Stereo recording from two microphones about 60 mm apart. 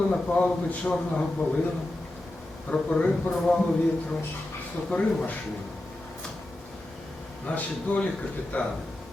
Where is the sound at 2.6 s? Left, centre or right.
Centre.